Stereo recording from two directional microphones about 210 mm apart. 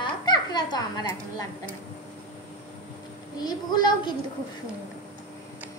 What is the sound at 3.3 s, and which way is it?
Speech, 20° left (ahead or behind).